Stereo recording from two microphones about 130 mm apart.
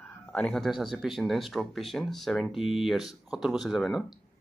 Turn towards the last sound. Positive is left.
turn(degrees=0)  # may be behind; listen again after turning